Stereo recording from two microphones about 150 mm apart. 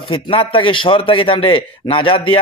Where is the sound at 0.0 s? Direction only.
35° left (ahead or behind).